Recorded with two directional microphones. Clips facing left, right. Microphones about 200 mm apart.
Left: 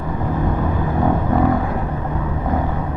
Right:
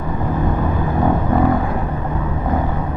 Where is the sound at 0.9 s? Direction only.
25° right (ahead or behind).